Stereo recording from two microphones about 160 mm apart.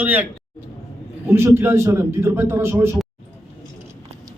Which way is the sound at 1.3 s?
15° right (ahead or behind).